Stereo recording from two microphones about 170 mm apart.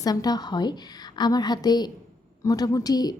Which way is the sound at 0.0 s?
20° left (ahead or behind).